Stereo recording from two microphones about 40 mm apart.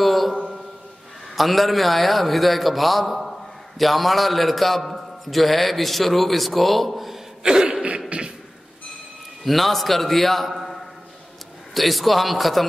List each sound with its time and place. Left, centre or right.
0.0 s mantra: centre
1.3 s a man's voice: centre
7.4 s throat clearing: centre
8.1 s beatboxing: right
9.4 s a man's voice: centre
11.7 s a man's voice: centre